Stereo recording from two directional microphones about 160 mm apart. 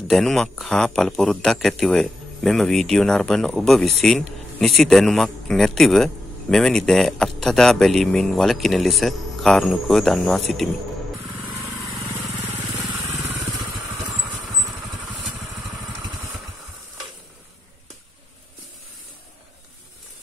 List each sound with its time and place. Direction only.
0.1 s a man's voice: centre (ahead or behind)
12.7 s vehicle: 15° right (ahead or behind)